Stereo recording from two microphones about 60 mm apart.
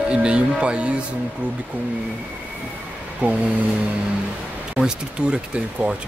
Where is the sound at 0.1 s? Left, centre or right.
Centre.